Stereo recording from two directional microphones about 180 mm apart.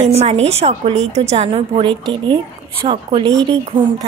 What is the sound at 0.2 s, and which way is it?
A woman's voice, 35° right (ahead or behind).